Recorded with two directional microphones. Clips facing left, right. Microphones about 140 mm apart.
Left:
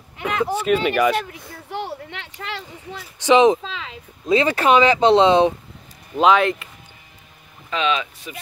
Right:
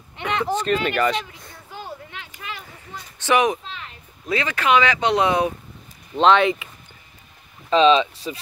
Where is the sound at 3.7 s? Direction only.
90° left.